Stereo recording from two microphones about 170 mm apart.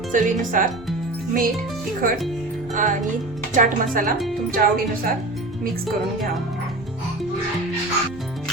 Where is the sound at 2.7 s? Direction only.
50° right (ahead or behind).